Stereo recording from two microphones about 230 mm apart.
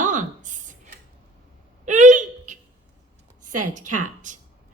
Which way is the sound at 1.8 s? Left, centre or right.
Right.